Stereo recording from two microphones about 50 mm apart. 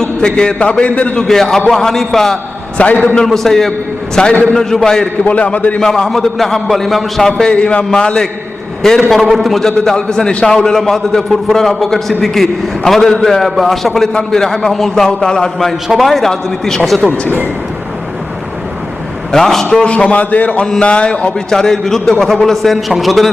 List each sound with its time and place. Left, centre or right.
0.2 s a man's voice: centre
1.3 s a man's voice: centre
2.7 s a man's voice: left
3.2 s a man's voice: centre
4.1 s a man's voice: centre
4.5 s a man's voice: centre
5.2 s a man's voice: left
5.8 s a man's voice: centre
7.5 s a man's voice: left; by 14.1 s centre
14.1 s a man's voice: centre
16.0 s a man's voice: centre
19.3 s a man's voice: centre
19.7 s a man's voice: left
21.5 s a man's voice: centre